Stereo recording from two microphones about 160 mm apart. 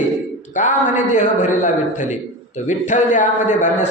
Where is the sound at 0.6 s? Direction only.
50° left (ahead or behind).